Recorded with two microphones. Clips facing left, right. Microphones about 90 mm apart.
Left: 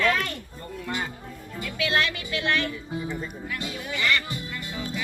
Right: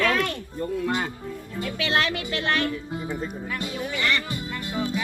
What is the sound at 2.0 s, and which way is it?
Speech, 45° right (ahead or behind).